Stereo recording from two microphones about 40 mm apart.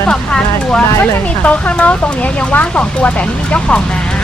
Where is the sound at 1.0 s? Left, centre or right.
Left.